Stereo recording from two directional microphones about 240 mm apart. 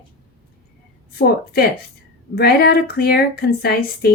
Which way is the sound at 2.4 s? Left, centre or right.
Left.